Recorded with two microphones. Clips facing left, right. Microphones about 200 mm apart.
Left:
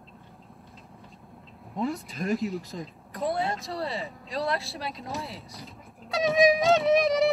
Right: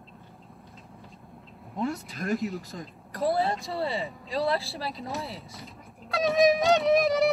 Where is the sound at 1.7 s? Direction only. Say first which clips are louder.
Left 1 dB; centre (ahead or behind).